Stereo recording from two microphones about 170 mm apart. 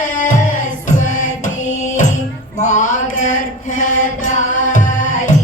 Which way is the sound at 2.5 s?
45° left (ahead or behind).